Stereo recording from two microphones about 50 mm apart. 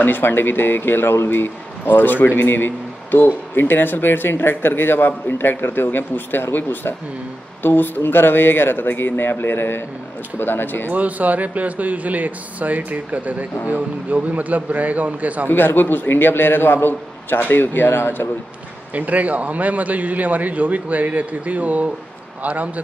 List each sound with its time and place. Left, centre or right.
0.0 s speech: left
2.2 s speech: left
10.9 s a man's voice: right
15.5 s speech: left
18.9 s a man's voice: right